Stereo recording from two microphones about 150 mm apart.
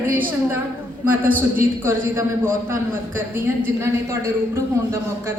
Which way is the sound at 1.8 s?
15° right (ahead or behind).